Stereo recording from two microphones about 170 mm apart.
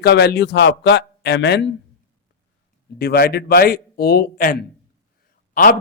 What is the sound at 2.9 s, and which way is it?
A man's voice, 65° left (ahead or behind).